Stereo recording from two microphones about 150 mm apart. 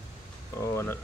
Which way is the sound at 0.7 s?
15° left (ahead or behind).